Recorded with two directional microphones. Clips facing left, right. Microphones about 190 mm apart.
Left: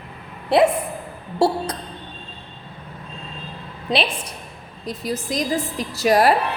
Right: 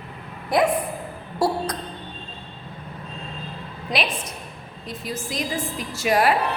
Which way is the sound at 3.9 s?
30° left (ahead or behind).